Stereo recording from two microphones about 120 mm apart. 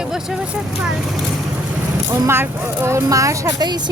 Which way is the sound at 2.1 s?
20° right (ahead or behind).